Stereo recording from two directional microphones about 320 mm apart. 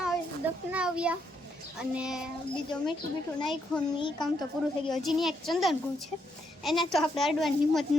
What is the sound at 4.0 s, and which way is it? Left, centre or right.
Speech, centre.